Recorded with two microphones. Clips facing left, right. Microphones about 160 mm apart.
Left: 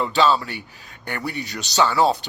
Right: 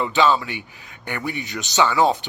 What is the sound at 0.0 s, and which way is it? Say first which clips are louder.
Speech: even; 20° right (ahead or behind).